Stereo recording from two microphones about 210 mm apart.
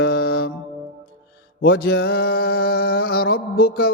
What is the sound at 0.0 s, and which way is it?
Music, 50° left (ahead or behind).